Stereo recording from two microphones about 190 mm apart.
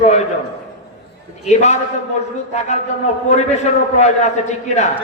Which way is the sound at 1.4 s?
35° left (ahead or behind).